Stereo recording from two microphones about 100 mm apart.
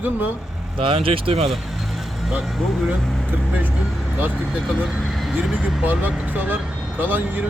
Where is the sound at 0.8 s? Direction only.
65° right (ahead or behind).